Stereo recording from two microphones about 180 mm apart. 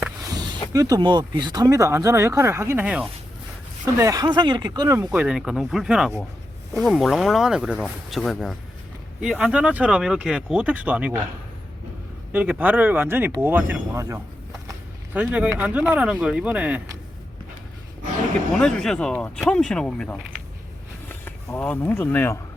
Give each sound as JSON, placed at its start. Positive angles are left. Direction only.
{"t": 0.3, "sound": "a sound", "side_deg": -20}
{"t": 0.7, "sound": "speech", "side_deg": -20}
{"t": 3.9, "sound": "speech", "side_deg": -20}
{"t": 12.3, "sound": "speech", "side_deg": -10}
{"t": 18.5, "sound": "speech", "side_deg": 5}